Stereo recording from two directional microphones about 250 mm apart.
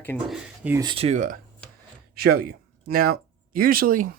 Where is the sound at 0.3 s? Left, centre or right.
Centre.